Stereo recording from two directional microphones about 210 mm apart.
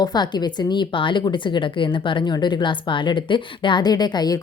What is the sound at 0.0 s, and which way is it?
A woman's voice, 20° left (ahead or behind).